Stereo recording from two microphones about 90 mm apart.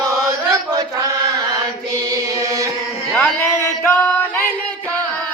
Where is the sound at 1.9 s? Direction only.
40° right (ahead or behind).